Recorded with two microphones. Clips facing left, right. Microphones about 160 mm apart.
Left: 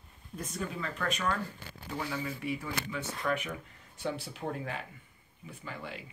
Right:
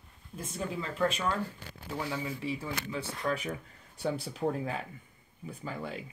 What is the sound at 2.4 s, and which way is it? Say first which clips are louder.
Speech: even; 30° right (ahead or behind).